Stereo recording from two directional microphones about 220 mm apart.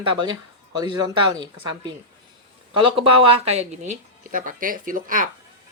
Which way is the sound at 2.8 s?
25° right (ahead or behind).